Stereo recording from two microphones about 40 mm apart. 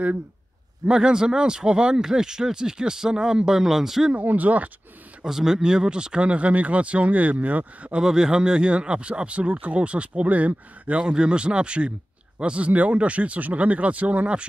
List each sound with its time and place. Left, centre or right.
0.8 s speech: right
4.1 s speech: right
5.2 s speech: centre; by 7.9 s right
8.0 s speech: centre; by 11.0 s right
11.0 s speech: right